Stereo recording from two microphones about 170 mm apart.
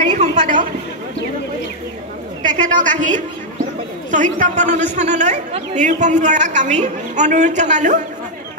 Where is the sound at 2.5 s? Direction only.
50° right (ahead or behind).